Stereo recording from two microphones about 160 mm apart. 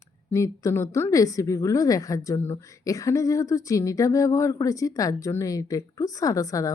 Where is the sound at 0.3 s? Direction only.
20° left (ahead or behind).